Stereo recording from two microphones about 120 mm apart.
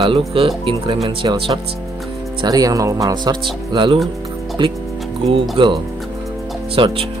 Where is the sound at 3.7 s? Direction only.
40° right (ahead or behind).